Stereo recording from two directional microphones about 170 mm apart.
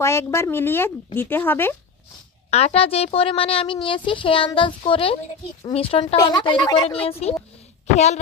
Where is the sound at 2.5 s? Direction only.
35° left (ahead or behind).